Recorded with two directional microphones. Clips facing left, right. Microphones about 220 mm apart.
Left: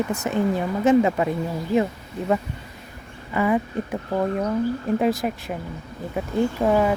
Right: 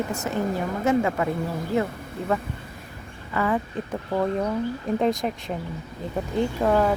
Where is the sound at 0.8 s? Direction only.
20° left (ahead or behind).